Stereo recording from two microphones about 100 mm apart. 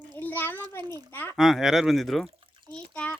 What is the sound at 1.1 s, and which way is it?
Speech, 20° left (ahead or behind).